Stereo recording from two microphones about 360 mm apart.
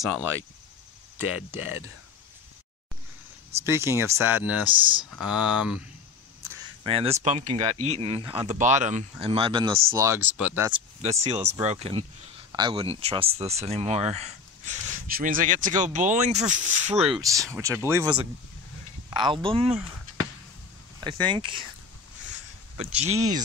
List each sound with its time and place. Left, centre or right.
0.2 s speech: centre
3.6 s speech: centre
5.3 s speech: centre
6.8 s speech: centre
11.0 s speech: centre
21.0 s speech: centre
22.8 s speech: centre